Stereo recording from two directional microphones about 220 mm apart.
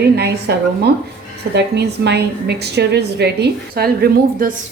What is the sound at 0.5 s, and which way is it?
A woman's voice, 50° right (ahead or behind).